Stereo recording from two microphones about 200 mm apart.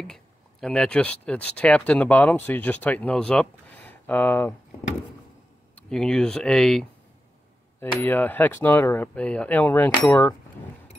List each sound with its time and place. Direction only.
0.0 s speech: 5° left (ahead or behind)
5.8 s speech: 5° left (ahead or behind)